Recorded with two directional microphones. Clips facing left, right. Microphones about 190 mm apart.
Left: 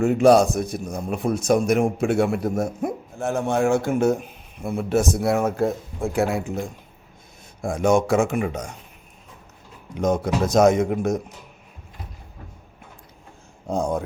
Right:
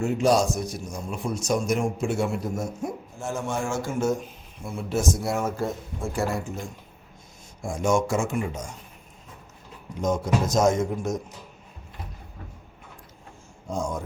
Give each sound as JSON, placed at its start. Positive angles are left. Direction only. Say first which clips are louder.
{"t": 0.0, "sound": "a man's voice", "louder": "left 6 dB", "side_deg": 60}
{"t": 7.6, "sound": "a man's voice", "louder": "left 4 dB", "side_deg": 60}
{"t": 10.0, "sound": "a man's voice", "louder": "left 3 dB", "side_deg": 60}
{"t": 13.7, "sound": "a man's voice", "louder": "left 6 dB", "side_deg": 60}